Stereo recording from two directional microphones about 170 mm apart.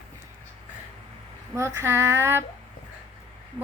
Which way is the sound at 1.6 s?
15° right (ahead or behind).